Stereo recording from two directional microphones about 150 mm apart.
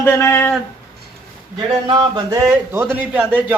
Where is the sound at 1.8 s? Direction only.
30° right (ahead or behind).